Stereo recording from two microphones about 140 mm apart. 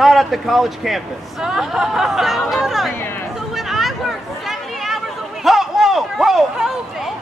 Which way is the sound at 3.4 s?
Centre (ahead or behind).